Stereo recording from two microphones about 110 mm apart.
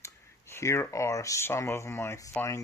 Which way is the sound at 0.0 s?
25° left (ahead or behind).